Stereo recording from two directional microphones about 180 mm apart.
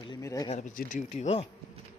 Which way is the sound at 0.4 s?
40° left (ahead or behind).